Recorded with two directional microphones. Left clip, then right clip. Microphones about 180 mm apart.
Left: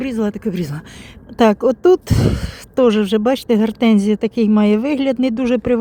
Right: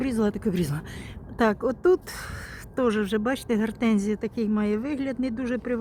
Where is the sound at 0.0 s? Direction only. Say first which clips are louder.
Left 5 dB; 20° left (ahead or behind).